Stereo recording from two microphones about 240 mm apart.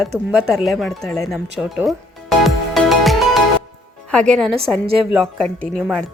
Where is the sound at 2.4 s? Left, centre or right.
Centre.